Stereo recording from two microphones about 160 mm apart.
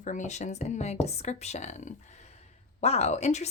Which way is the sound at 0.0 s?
50° left (ahead or behind).